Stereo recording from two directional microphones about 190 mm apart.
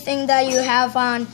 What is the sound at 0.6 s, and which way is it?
Speech, 25° left (ahead or behind).